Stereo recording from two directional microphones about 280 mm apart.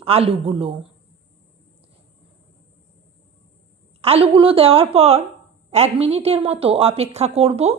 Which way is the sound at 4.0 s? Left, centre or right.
Right.